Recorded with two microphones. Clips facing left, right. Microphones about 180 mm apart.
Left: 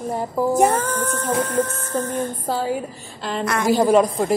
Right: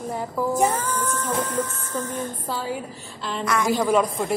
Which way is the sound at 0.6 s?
60° left (ahead or behind).